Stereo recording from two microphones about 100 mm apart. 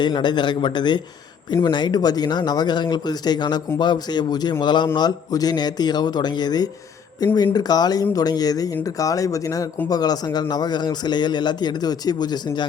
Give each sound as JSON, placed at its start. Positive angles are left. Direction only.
{"t": 0.0, "sound": "a man's voice", "side_deg": 50}